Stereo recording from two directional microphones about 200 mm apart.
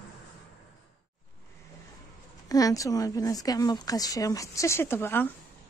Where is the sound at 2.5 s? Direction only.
20° left (ahead or behind).